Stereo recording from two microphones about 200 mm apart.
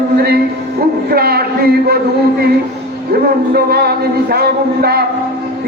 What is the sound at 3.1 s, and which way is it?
A man's voice, 50° right (ahead or behind).